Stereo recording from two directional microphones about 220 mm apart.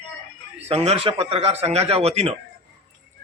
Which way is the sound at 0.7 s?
30° right (ahead or behind).